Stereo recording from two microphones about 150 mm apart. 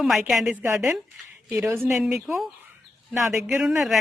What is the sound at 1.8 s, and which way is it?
Speech, 5° right (ahead or behind).